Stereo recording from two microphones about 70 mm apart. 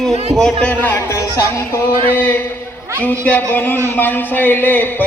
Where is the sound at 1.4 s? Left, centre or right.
Left.